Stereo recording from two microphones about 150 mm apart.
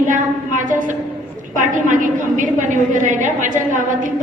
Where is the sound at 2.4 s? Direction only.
60° right (ahead or behind).